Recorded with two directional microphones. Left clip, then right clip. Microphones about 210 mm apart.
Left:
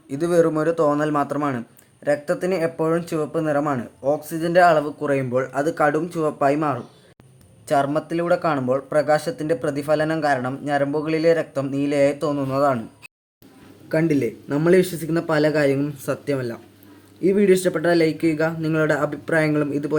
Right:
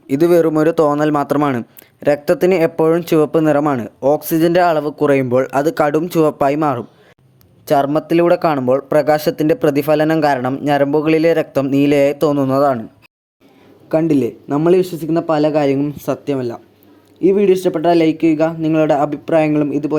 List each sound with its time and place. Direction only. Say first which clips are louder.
0.1 s speech: right 6 dB; 40° right (ahead or behind)
7.7 s speech: right 6 dB; 35° right (ahead or behind)
14.1 s speech: right 6 dB; 25° right (ahead or behind)